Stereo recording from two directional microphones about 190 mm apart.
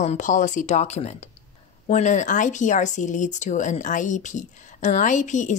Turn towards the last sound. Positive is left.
turn(degrees=40)  # may be behind; listen again after turning